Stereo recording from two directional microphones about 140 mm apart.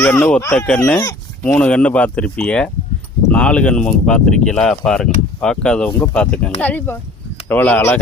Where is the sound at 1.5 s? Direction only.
5° left (ahead or behind).